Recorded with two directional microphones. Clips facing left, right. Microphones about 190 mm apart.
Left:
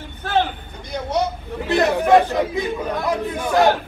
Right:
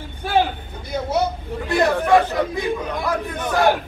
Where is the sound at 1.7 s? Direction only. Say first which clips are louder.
Left 1 dB; 20° left (ahead or behind).